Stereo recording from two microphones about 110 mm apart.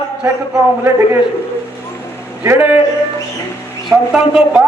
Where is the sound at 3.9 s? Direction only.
5° right (ahead or behind).